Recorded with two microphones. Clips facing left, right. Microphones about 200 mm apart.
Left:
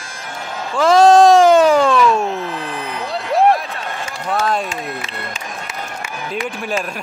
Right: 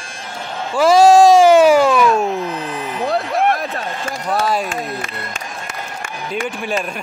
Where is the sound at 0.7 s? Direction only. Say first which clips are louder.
Right 1 dB; 15° right (ahead or behind).